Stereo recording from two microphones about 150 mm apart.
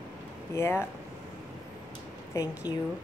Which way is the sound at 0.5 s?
15° left (ahead or behind).